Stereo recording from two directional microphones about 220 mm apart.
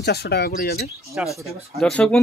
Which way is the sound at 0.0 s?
45° left (ahead or behind).